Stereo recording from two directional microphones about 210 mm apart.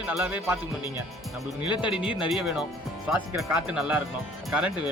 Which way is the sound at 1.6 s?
25° left (ahead or behind).